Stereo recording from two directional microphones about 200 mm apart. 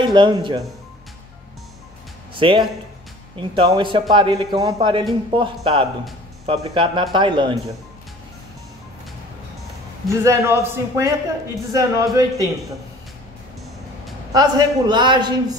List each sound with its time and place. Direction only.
0.0 s a man's voice: 25° right (ahead or behind)
2.3 s a man's voice: 25° right (ahead or behind)
10.0 s a man's voice: 15° right (ahead or behind)
14.3 s a man's voice: 20° right (ahead or behind)